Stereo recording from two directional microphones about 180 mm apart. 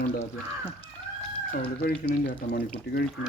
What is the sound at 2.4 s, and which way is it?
Speech, 60° left (ahead or behind).